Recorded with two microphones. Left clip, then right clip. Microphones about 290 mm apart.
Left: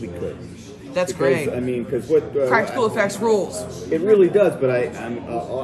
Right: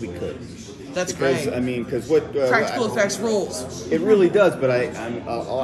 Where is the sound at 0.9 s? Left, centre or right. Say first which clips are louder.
Left 3 dB; left.